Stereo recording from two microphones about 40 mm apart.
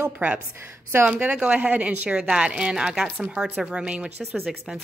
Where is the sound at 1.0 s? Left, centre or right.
Right.